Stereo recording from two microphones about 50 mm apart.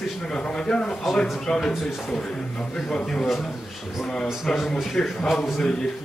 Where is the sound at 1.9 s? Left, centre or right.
Centre.